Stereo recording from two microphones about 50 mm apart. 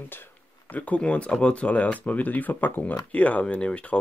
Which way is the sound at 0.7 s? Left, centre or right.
Left.